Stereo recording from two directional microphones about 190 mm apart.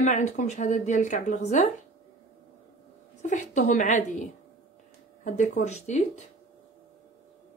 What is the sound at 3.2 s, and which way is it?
Speech, 40° left (ahead or behind).